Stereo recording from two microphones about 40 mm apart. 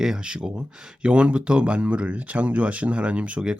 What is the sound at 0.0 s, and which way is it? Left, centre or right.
Speech, right.